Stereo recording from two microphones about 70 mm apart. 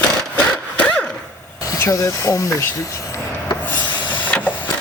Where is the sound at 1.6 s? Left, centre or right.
Left.